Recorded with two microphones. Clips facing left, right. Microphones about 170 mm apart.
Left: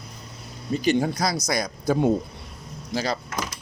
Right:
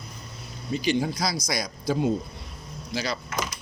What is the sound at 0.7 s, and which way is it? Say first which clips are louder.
Speech: left 3 dB; 45° left (ahead or behind).